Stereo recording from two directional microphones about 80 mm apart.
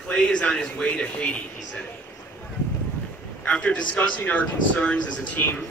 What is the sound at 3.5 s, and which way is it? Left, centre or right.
A man's voice, centre.